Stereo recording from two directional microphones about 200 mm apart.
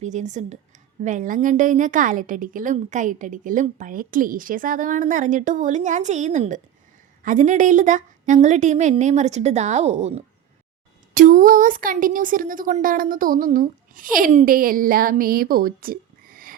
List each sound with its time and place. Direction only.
0.0 s a woman's voice: 35° right (ahead or behind)